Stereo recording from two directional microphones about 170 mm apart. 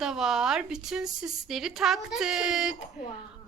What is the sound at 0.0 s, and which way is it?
A woman's voice, 5° right (ahead or behind).